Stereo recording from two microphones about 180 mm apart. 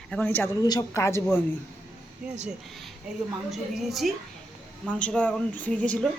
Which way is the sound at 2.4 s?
Centre (ahead or behind).